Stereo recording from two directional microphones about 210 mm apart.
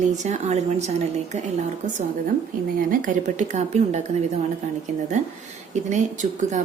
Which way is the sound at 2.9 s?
40° right (ahead or behind).